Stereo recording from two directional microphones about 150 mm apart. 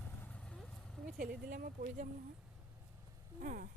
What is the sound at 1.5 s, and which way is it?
Speech, 70° right (ahead or behind).